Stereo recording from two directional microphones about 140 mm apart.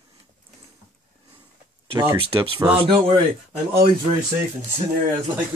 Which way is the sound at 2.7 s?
40° right (ahead or behind).